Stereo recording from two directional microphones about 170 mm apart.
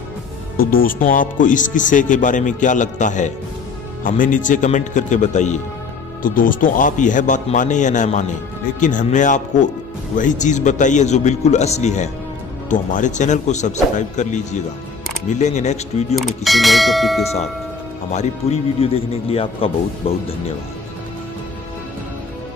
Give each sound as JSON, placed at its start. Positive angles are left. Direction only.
{"t": 0.6, "sound": "speech", "side_deg": 60}
{"t": 6.2, "sound": "speech", "side_deg": 55}
{"t": 16.2, "sound": "speech", "side_deg": 0}
{"t": 17.2, "sound": "a man's voice", "side_deg": 40}